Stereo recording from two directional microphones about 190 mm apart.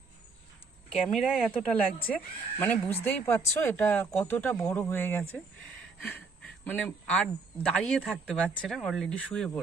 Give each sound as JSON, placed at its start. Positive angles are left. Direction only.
{"t": 0.9, "sound": "speech", "side_deg": 0}